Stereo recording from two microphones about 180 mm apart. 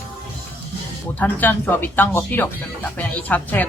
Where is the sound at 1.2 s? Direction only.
10° left (ahead or behind).